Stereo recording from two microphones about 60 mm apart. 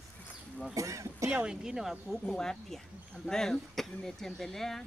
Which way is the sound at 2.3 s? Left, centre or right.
Centre.